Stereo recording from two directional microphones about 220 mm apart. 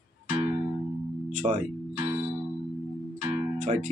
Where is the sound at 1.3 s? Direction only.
35° right (ahead or behind).